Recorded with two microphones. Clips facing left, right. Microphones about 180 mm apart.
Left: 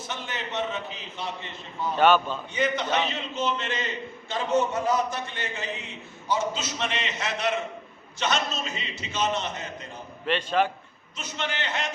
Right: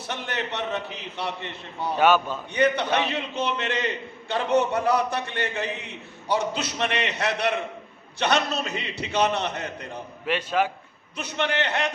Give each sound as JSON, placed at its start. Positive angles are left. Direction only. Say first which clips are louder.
{"t": 0.0, "sound": "a man's voice", "louder": "right 4 dB", "side_deg": -65}
{"t": 2.0, "sound": "a man's voice", "louder": "even", "side_deg": -10}
{"t": 2.5, "sound": "a man's voice", "louder": "right 4 dB", "side_deg": -65}
{"t": 10.2, "sound": "a man's voice", "louder": "even", "side_deg": -10}
{"t": 11.2, "sound": "a man's voice", "louder": "right 6 dB", "side_deg": -65}